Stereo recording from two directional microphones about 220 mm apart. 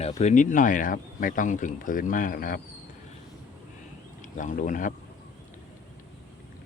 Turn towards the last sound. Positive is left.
turn(degrees=35)  # may be behind; listen again after turning